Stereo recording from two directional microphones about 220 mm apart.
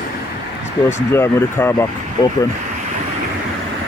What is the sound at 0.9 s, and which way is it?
Speech, 10° left (ahead or behind).